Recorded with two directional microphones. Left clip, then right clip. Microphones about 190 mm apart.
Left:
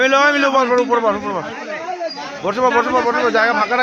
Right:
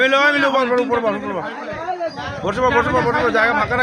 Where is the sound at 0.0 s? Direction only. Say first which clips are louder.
Left 1 dB; 40° left (ahead or behind).